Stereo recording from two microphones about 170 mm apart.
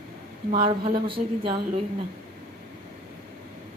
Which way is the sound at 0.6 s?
30° right (ahead or behind).